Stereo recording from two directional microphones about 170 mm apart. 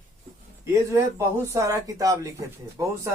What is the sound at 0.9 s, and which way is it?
Speech, 15° right (ahead or behind).